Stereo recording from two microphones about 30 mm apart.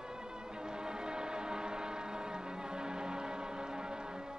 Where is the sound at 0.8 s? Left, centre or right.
Right.